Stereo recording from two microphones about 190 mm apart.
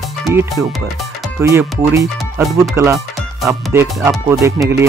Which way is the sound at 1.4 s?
15° right (ahead or behind).